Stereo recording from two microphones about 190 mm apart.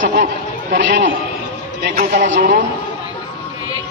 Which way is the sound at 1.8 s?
55° right (ahead or behind).